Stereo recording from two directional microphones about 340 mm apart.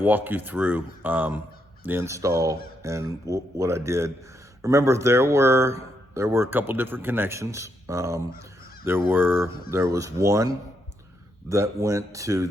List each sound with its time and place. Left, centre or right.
0.0 s speech: centre